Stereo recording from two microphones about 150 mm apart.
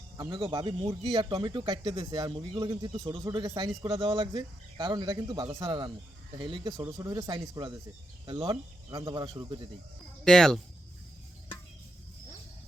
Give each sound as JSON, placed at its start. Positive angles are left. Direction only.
{"t": 0.2, "sound": "speech", "side_deg": -30}
{"t": 10.2, "sound": "speech", "side_deg": 0}